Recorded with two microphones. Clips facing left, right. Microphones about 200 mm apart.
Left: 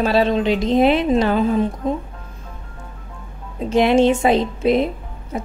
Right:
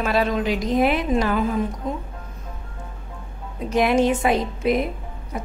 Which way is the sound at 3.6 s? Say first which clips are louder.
Left 4 dB; 25° left (ahead or behind).